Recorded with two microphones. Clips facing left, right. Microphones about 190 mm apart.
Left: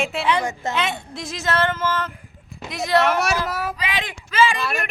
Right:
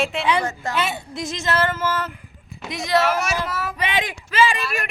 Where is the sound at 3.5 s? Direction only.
40° left (ahead or behind).